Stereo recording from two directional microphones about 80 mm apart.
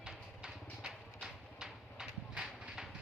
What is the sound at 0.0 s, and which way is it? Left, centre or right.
Vehicle, centre.